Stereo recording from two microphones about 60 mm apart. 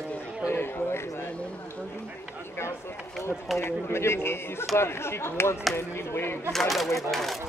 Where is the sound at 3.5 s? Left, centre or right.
Left.